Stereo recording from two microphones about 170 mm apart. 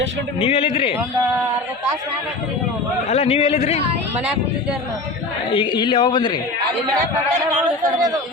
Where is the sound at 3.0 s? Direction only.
40° left (ahead or behind).